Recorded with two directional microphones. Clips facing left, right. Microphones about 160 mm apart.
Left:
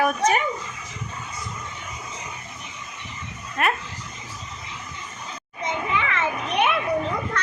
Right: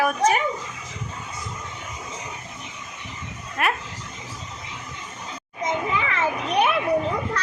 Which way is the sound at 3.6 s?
5° right (ahead or behind).